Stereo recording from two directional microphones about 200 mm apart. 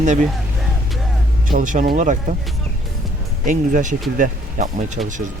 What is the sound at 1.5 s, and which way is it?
Speech, 40° right (ahead or behind).